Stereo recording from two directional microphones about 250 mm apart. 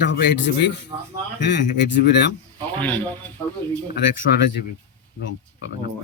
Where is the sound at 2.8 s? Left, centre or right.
Centre.